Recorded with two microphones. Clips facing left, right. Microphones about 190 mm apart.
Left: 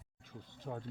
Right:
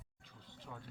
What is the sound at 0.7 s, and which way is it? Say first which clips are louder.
Speech: left 9 dB; 50° left (ahead or behind).